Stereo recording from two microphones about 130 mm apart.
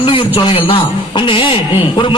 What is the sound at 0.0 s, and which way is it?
A man's voice, 40° left (ahead or behind).